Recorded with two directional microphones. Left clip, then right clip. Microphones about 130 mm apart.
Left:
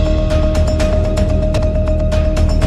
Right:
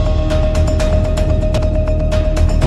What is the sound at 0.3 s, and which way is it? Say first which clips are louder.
Music: left 1 dB; centre (ahead or behind).